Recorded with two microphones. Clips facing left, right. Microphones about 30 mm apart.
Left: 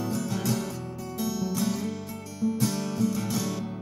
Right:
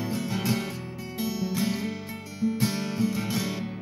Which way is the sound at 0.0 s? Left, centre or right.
Right.